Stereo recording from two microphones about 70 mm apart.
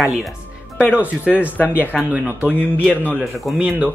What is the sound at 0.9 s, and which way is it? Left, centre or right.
Speech, centre.